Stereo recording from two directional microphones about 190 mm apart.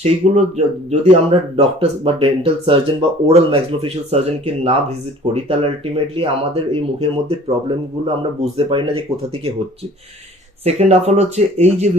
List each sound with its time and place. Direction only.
0.0 s speech: 35° right (ahead or behind)
10.6 s speech: 35° right (ahead or behind)